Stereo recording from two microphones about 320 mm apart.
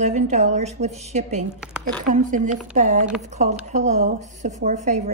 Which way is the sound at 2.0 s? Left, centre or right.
Right.